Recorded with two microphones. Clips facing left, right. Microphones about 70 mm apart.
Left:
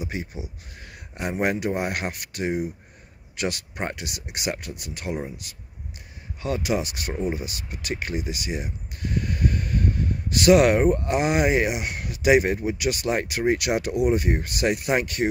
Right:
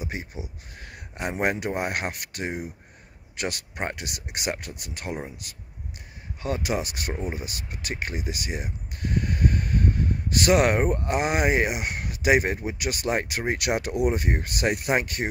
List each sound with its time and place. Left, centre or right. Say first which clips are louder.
0.1 s speech: left 3 dB; right
0.8 s a sound: left 1 dB; right
1.4 s speech: left 2 dB; right
14.9 s speech: left 2 dB; right